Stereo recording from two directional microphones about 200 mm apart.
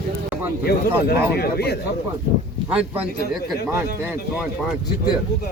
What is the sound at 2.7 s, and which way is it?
Speech, 5° right (ahead or behind).